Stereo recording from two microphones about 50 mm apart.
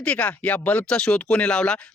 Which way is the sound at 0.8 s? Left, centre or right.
Centre.